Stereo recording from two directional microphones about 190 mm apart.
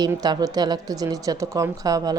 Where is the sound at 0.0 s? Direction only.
20° right (ahead or behind).